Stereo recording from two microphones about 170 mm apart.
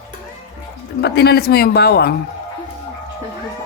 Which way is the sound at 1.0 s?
75° left (ahead or behind).